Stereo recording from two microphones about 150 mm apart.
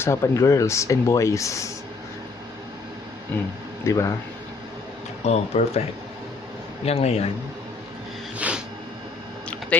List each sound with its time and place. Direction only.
0.0 s speech: 20° left (ahead or behind)
3.8 s speech: 20° left (ahead or behind)
5.2 s speech: 45° left (ahead or behind)
6.8 s speech: 45° left (ahead or behind)
8.4 s a sound: 10° right (ahead or behind)